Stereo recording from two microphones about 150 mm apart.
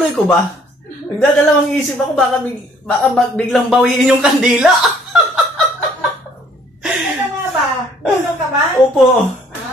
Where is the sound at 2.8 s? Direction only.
5° left (ahead or behind).